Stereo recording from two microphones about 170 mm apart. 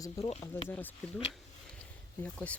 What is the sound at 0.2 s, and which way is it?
Speech, 35° left (ahead or behind).